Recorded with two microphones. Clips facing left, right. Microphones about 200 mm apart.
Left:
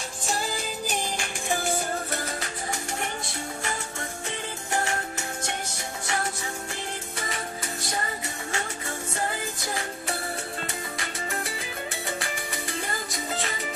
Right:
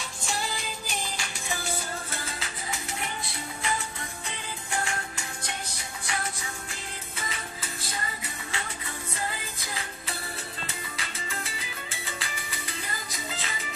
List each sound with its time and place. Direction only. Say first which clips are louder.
0.3 s music: left 4 dB; 45° left (ahead or behind)
4.7 s music: left 4 dB; 40° left (ahead or behind)
7.2 s music: left 3 dB; 45° left (ahead or behind)